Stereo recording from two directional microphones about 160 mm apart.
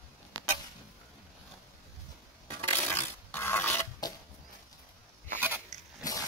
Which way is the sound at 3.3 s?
15° left (ahead or behind).